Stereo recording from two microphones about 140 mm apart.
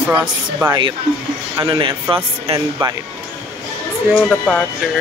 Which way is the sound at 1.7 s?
35° right (ahead or behind).